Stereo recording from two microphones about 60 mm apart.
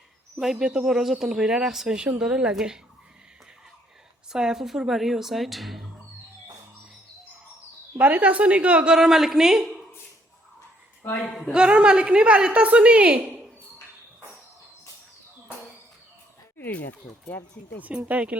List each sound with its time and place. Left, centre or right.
0.6 s speech: centre
4.3 s speech: centre
7.9 s a woman's voice: right
8.9 s speech: centre
11.0 s speech: left
11.5 s a woman's voice: centre
16.6 s speech: left
17.8 s a woman's voice: right